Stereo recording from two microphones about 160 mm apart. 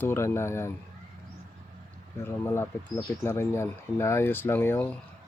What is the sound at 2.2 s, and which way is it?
Speech, 15° left (ahead or behind).